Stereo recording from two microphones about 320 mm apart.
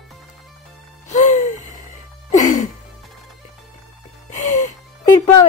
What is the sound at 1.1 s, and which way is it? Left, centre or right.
Music, left.